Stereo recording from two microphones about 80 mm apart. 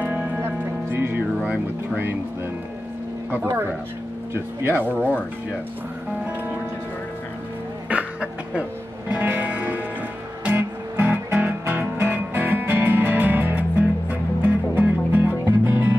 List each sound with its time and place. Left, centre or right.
0.0 s music: right
1.4 s speech: right
3.4 s speech: right
7.9 s a sound: centre
9.1 s music: right